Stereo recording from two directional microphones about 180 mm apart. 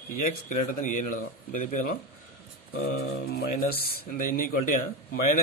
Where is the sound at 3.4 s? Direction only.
55° left (ahead or behind).